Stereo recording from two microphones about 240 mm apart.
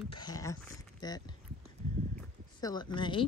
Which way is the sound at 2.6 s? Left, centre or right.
Centre.